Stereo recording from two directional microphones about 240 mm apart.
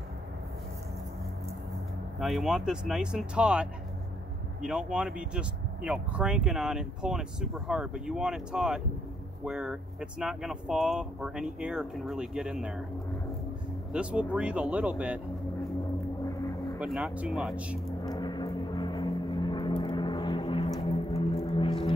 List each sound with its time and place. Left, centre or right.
2.1 s speech: centre
13.9 s speech: centre
16.8 s speech: centre
18.0 s a sound: centre
20.8 s squish: left